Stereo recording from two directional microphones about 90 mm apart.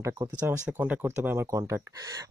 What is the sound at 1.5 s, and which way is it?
Speech, 40° right (ahead or behind).